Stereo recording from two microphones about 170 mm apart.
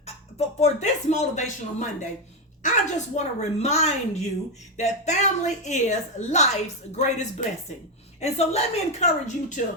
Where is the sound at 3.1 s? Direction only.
40° left (ahead or behind).